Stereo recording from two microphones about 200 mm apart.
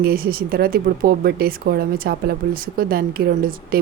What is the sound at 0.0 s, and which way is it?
A woman's voice, 50° right (ahead or behind).